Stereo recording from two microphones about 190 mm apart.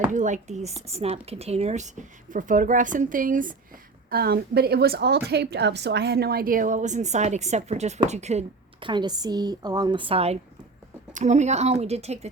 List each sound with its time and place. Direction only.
0.1 s a woman's voice: 40° right (ahead or behind)